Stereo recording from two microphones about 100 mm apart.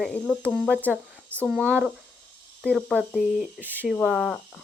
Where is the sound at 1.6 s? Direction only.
20° right (ahead or behind).